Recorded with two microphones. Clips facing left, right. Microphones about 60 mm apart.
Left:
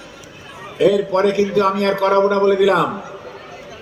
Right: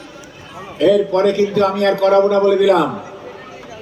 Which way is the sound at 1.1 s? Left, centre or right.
Left.